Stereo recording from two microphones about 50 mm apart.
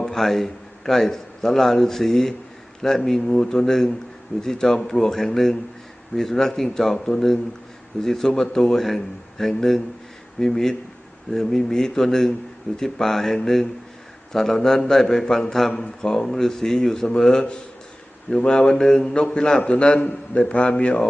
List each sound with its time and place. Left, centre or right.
0.0 s a man's voice: centre